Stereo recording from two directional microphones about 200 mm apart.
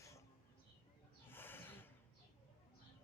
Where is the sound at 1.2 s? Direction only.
10° left (ahead or behind).